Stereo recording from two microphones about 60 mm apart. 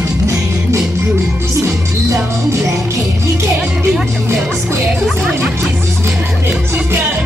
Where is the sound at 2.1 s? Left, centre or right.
Right.